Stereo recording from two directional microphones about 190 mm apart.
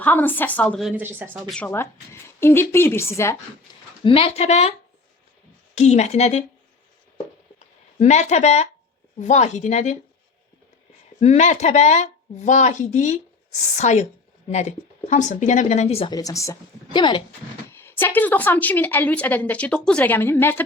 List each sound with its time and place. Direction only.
0.0 s a woman's voice: 10° left (ahead or behind); by 1.4 s 10° right (ahead or behind)
1.5 s a woman's voice: 5° left (ahead or behind)
3.7 s a sound: 20° left (ahead or behind)
4.0 s speech: 30° left (ahead or behind)
5.7 s speech: 35° left (ahead or behind)
7.9 s speech: 35° left (ahead or behind)
11.2 s speech: 35° left (ahead or behind)
16.1 s speech: 15° left (ahead or behind)
17.7 s a woman's voice: 10° left (ahead or behind)